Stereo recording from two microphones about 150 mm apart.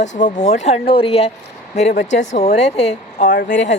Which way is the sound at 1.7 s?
50° left (ahead or behind).